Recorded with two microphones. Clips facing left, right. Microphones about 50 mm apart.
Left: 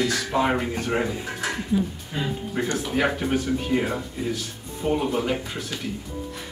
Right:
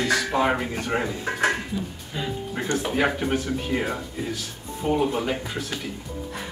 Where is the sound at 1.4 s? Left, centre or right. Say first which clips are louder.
Right 7 dB; right.